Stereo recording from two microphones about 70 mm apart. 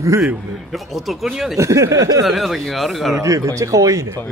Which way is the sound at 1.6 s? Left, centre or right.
Right.